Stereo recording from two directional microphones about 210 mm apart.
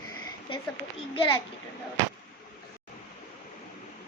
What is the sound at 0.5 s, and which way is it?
Speech, 25° left (ahead or behind).